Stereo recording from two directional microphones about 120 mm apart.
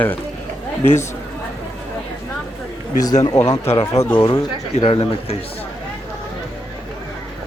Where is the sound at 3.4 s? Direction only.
25° left (ahead or behind).